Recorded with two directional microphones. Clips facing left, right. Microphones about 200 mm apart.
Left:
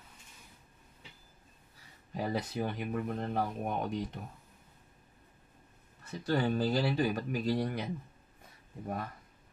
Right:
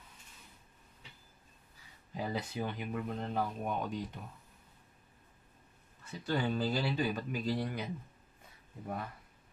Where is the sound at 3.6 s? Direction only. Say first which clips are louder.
Left 2 dB; 55° left (ahead or behind).